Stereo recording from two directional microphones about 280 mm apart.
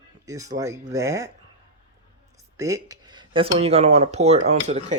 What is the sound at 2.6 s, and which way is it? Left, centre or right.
Speech, centre.